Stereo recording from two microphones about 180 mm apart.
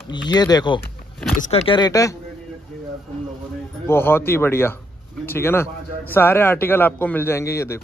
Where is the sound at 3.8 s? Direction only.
15° left (ahead or behind).